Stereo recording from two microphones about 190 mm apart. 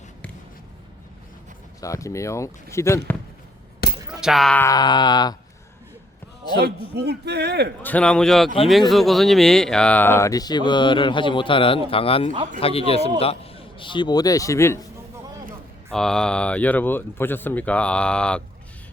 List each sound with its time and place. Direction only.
1.8 s speech: 15° left (ahead or behind)
4.2 s speech: centre (ahead or behind)
4.6 s a man's voice: 20° left (ahead or behind)
6.9 s speech: 60° right (ahead or behind)
7.8 s a man's voice: 10° left (ahead or behind)
15.9 s speech: centre (ahead or behind)